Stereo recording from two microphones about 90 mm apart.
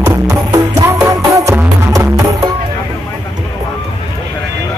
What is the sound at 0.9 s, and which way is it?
Music, 40° right (ahead or behind).